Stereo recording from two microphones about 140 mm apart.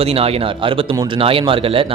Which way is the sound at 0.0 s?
45° right (ahead or behind).